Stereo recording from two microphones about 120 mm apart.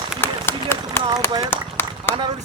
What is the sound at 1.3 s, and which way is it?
Speech, 35° right (ahead or behind).